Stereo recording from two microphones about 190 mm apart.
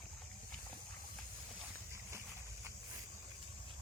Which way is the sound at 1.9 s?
15° right (ahead or behind).